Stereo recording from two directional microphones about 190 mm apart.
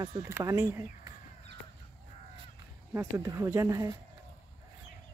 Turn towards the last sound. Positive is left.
turn(degrees=-15)  # may be behind; listen again after turning